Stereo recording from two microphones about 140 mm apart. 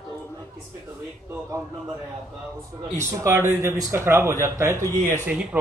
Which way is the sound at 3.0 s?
20° right (ahead or behind).